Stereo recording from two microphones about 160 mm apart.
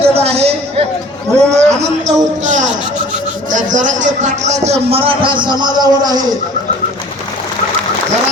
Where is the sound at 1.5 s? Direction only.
45° right (ahead or behind); by 6.4 s 25° right (ahead or behind).